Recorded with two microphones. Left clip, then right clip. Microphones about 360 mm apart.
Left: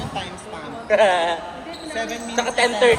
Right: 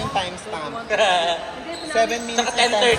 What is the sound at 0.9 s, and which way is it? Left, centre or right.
Speech, centre.